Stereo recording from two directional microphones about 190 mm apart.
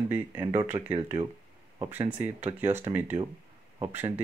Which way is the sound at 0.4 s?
25° right (ahead or behind).